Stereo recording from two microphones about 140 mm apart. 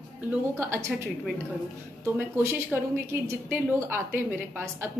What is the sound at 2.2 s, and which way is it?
A woman's voice, 15° right (ahead or behind).